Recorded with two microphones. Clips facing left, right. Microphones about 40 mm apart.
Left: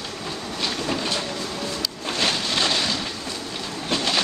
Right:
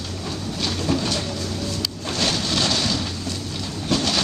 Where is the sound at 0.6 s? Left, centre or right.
Centre.